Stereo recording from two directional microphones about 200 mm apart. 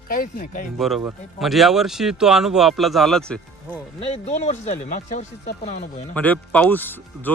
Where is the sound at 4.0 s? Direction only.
30° left (ahead or behind).